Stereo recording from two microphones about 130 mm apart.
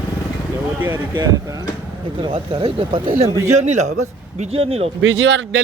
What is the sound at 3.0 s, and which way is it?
Speech, 50° right (ahead or behind).